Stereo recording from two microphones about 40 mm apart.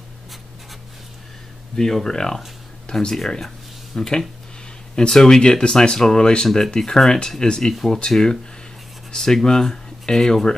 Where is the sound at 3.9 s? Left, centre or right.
Centre.